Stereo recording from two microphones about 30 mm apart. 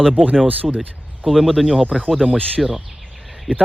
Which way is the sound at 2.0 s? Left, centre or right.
Centre.